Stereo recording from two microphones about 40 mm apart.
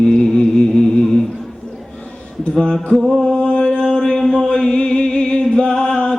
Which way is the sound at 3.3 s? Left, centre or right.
Left.